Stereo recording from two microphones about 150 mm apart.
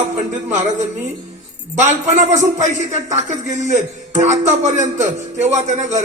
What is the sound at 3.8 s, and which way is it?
Speech, 50° right (ahead or behind).